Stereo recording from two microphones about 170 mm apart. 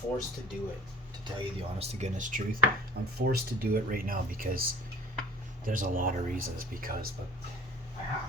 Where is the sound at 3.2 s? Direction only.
65° right (ahead or behind).